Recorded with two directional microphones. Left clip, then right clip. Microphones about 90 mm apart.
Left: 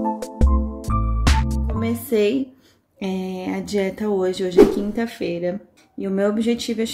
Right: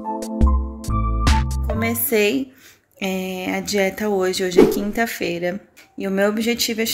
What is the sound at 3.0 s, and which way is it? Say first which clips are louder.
A woman's voice: right 3 dB; 25° left (ahead or behind).